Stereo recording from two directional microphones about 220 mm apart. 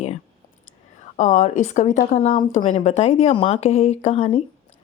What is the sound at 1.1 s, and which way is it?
A woman's voice, 35° left (ahead or behind).